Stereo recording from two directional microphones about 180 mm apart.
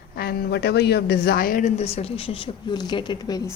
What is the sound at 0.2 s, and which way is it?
A woman's voice, 60° left (ahead or behind).